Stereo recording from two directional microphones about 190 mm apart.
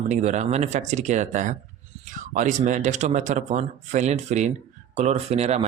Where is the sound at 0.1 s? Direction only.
40° right (ahead or behind).